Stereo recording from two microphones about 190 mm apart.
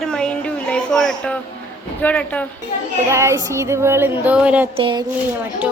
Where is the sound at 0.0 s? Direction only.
5° left (ahead or behind).